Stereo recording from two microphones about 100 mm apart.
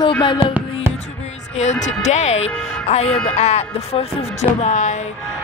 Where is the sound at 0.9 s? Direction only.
90° left.